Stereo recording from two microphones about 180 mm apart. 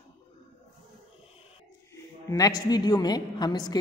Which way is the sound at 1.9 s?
20° left (ahead or behind).